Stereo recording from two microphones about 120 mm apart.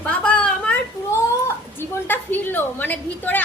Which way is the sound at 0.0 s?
10° left (ahead or behind).